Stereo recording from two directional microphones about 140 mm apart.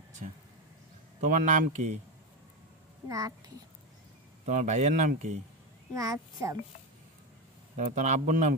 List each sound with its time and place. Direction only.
1.2 s speech: 65° right (ahead or behind)
3.1 s a child's voice: 25° right (ahead or behind)
4.5 s speech: 60° right (ahead or behind)
5.9 s a child's voice: 25° right (ahead or behind)
7.7 s speech: 65° right (ahead or behind)